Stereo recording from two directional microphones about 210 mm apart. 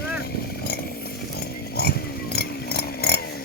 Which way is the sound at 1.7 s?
50° left (ahead or behind).